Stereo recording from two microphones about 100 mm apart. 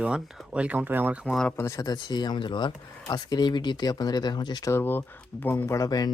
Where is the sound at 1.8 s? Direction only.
45° left (ahead or behind).